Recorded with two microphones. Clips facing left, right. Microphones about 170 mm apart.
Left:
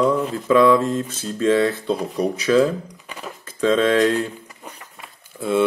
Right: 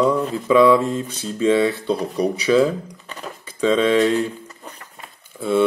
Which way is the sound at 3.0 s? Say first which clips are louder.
Right 1 dB; 10° left (ahead or behind).